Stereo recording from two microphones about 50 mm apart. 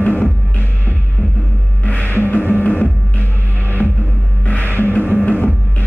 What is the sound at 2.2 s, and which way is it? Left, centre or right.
Music, left.